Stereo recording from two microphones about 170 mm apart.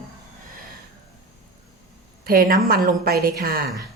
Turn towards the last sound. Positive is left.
turn(degrees=-60)  # may be behind; listen again after turning